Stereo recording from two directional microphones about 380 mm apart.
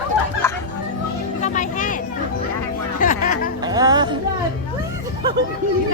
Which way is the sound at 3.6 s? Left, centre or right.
Centre.